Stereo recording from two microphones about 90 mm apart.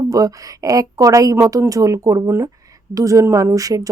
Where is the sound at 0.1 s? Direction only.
40° right (ahead or behind).